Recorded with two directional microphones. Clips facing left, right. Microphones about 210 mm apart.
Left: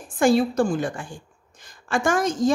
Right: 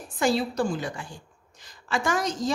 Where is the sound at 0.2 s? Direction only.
50° left (ahead or behind).